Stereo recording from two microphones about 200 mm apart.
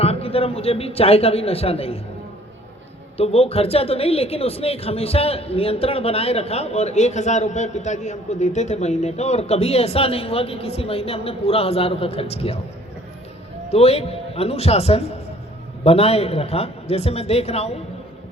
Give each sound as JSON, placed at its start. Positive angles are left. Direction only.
{"t": 0.0, "sound": "speech", "side_deg": 30}
{"t": 3.2, "sound": "speech", "side_deg": 30}
{"t": 13.7, "sound": "a man's voice", "side_deg": 30}